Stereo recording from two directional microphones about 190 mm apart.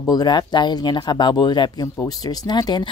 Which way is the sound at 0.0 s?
20° left (ahead or behind).